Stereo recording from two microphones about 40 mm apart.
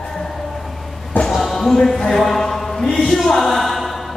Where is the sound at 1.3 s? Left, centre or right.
Centre.